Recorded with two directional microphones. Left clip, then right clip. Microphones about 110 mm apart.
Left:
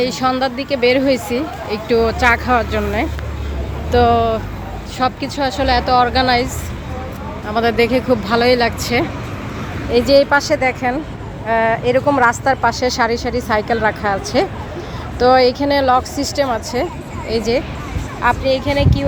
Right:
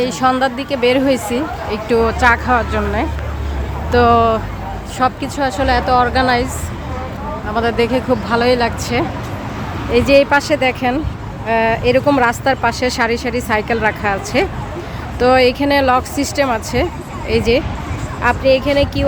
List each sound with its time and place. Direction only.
0.0 s speech: 15° right (ahead or behind)
3.9 s speech: 25° right (ahead or behind)
4.9 s speech: 5° right (ahead or behind)
7.4 s speech: 10° left (ahead or behind)
10.1 s speech: 30° right (ahead or behind)
18.2 s speech: 55° right (ahead or behind)